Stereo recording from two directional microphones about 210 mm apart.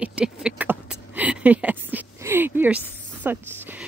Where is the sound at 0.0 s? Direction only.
5° right (ahead or behind).